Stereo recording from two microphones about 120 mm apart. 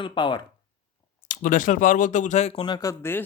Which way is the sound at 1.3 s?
90° left.